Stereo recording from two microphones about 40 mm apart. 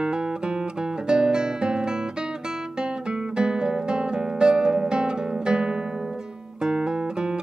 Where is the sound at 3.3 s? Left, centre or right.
Centre.